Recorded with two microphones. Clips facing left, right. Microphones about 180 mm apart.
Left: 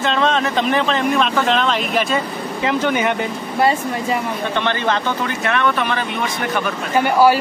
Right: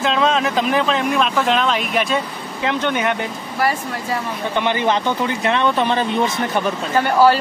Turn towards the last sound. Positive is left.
turn(degrees=10)  # may be behind; listen again after turning